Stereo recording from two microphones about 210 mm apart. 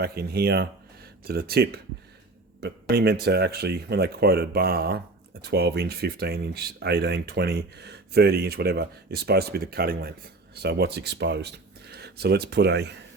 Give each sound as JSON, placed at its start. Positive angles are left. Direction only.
{"t": 0.0, "sound": "speech", "side_deg": -45}